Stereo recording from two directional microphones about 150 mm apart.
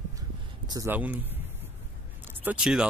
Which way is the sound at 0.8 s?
10° right (ahead or behind).